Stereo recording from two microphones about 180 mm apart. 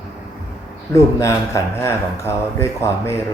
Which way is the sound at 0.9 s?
15° left (ahead or behind).